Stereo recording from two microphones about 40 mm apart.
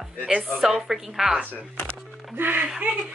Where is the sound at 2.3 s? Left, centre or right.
Right.